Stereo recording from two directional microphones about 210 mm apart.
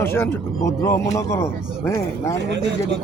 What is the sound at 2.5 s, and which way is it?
Speech, 55° right (ahead or behind).